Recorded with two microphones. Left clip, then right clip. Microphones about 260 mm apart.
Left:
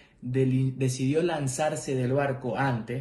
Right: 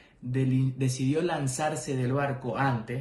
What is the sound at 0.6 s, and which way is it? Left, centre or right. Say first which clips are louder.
Speech: left 1 dB; right.